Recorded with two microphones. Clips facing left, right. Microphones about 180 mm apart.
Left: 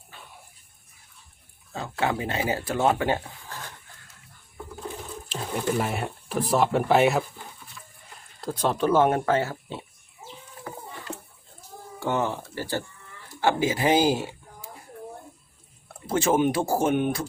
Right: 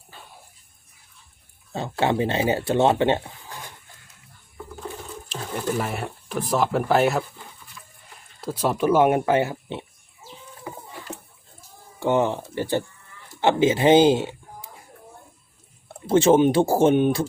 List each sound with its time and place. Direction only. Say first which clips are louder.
1.7 s speech: right 4 dB; 30° right (ahead or behind)
5.4 s speech: even; centre (ahead or behind)
8.4 s speech: right 2 dB; 5° right (ahead or behind)
10.7 s rowboat: right 2 dB; 10° right (ahead or behind)
11.9 s speech: right 5 dB; 20° right (ahead or behind)
16.0 s speech: right 6 dB; 25° right (ahead or behind)